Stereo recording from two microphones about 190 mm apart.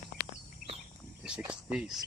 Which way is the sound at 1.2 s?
5° right (ahead or behind).